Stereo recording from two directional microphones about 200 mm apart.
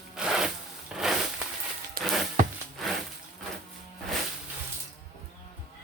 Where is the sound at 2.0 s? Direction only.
50° right (ahead or behind).